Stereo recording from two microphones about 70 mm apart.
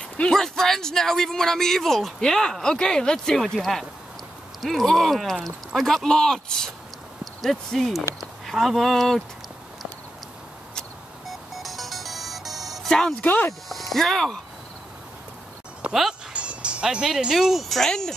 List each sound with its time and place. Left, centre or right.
0.2 s speech: centre
10.7 s music: centre
13.2 s speech: left
13.7 s speech: centre
15.9 s speech: centre
16.3 s speech: centre